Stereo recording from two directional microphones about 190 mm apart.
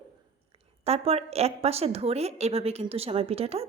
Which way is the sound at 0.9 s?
30° right (ahead or behind).